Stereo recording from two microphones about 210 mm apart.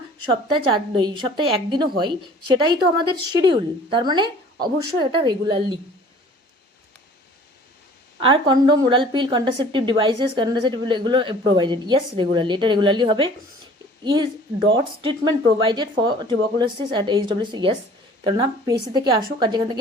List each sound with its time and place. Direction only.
0.3 s a woman's voice: 20° right (ahead or behind)
8.2 s a woman's voice: 25° right (ahead or behind)